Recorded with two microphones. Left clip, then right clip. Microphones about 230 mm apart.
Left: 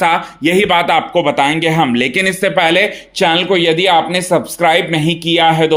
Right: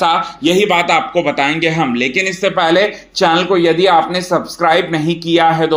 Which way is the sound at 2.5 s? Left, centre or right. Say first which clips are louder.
Even; left.